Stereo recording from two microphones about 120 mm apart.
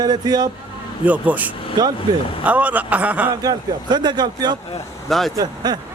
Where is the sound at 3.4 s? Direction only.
35° right (ahead or behind).